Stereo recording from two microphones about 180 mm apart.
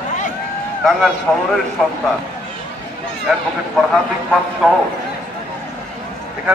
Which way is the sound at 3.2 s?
Centre (ahead or behind).